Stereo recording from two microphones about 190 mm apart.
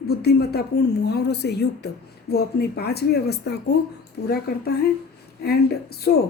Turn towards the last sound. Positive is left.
turn(degrees=55)  # may be behind; listen again after turning